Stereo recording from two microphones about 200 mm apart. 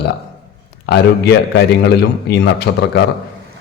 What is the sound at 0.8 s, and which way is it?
Speech, 55° left (ahead or behind).